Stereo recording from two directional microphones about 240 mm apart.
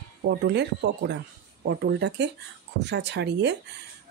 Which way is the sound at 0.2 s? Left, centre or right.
Right.